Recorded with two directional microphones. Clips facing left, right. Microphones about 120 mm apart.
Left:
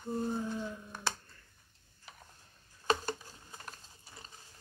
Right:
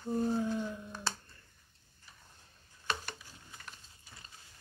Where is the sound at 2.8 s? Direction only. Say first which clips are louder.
Left 7 dB; 40° left (ahead or behind).